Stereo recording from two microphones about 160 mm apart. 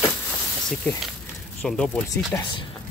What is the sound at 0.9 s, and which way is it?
Speech, 10° left (ahead or behind).